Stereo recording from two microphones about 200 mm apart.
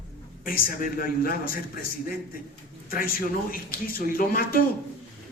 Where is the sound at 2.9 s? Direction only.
45° left (ahead or behind).